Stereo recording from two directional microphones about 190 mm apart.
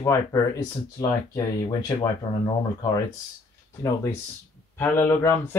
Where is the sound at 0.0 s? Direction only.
15° left (ahead or behind).